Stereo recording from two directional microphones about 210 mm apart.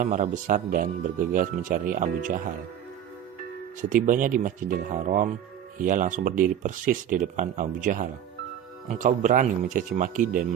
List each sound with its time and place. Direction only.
0.0 s speech: 35° right (ahead or behind)
4.0 s speech: 40° right (ahead or behind)